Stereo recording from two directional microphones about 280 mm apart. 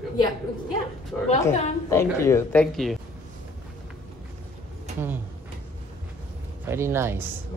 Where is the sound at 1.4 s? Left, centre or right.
Centre.